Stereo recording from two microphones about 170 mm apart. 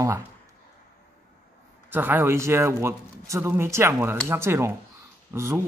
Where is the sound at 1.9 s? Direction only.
10° right (ahead or behind).